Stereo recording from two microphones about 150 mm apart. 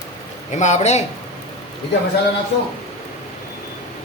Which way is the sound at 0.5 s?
50° left (ahead or behind).